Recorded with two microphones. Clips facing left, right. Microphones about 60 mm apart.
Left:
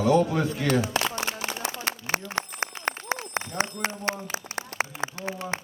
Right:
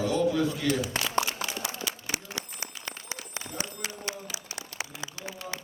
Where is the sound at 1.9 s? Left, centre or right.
Left.